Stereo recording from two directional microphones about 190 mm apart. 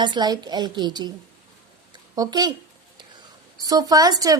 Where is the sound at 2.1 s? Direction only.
20° right (ahead or behind).